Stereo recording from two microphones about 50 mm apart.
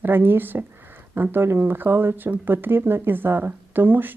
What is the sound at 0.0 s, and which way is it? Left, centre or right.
A woman's voice, right.